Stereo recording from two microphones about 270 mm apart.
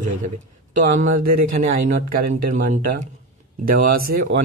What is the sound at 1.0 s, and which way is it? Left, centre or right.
Speech, right.